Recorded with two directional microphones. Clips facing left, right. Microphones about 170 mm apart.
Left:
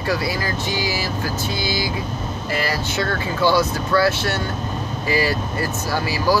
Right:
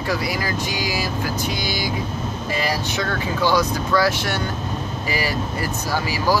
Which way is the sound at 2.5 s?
15° right (ahead or behind).